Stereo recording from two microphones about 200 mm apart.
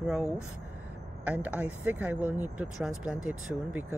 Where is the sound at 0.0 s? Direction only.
5° right (ahead or behind).